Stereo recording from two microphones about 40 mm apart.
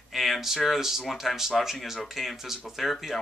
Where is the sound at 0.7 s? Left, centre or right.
Centre.